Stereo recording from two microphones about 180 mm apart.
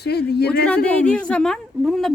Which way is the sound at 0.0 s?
65° left (ahead or behind).